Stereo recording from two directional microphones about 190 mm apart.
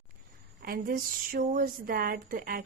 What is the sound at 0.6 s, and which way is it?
Speech, 50° right (ahead or behind).